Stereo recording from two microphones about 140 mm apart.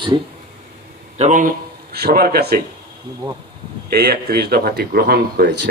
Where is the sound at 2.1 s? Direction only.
90° right.